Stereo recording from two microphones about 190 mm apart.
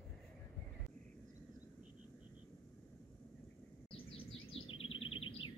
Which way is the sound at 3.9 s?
30° left (ahead or behind).